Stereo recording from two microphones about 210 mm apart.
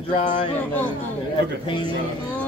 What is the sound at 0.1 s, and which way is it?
Speech, 35° left (ahead or behind).